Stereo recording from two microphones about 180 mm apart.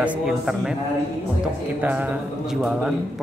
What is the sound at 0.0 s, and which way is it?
Speech, 5° right (ahead or behind).